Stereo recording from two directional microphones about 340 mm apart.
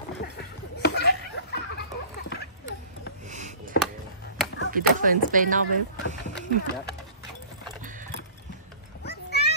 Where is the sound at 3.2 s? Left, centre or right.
Right.